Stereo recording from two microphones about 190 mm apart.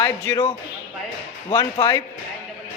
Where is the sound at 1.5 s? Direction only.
20° left (ahead or behind).